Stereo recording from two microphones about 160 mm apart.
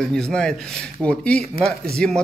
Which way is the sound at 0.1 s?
5° left (ahead or behind).